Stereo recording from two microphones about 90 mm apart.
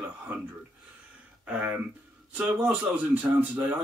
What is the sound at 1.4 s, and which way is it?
Speech, 15° right (ahead or behind).